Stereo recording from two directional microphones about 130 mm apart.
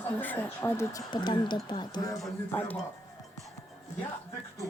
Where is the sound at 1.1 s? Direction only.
35° left (ahead or behind).